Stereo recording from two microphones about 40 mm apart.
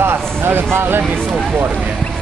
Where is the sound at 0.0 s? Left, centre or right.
Right.